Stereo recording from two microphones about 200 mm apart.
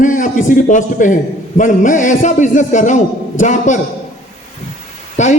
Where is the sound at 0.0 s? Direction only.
40° left (ahead or behind).